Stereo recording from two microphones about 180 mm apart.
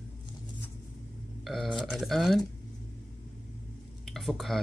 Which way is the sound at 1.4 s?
Centre (ahead or behind).